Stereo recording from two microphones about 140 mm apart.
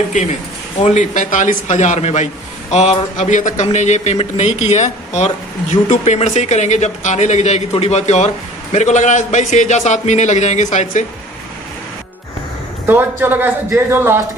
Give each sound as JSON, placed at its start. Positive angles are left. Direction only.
{"t": 0.8, "sound": "speech", "side_deg": 60}
{"t": 12.8, "sound": "a man's voice", "side_deg": -15}